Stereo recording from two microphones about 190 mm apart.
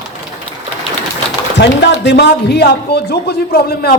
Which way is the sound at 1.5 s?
70° left (ahead or behind).